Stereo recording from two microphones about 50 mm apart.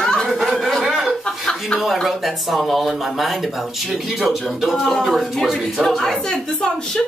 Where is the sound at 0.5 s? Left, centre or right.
Centre.